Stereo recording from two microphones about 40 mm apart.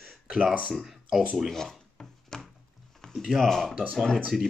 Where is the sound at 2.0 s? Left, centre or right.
Centre.